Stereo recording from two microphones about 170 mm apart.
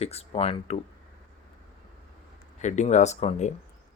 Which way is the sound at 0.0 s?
35° left (ahead or behind).